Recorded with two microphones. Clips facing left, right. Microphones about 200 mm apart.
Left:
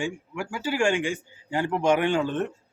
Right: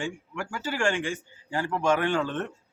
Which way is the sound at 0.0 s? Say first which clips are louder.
Left 3 dB; 10° left (ahead or behind).